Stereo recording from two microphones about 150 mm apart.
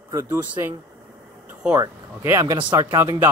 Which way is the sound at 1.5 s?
10° right (ahead or behind).